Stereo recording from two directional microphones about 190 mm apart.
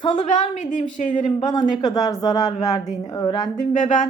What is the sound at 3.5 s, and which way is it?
Speech, 40° left (ahead or behind).